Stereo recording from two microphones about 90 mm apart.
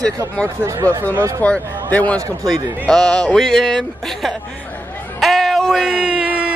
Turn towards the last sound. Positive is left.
turn(degrees=-15)  # may be behind; listen again after turning